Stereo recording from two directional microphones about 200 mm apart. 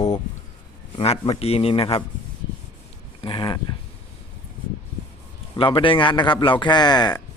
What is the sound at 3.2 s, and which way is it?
Speech, 25° left (ahead or behind).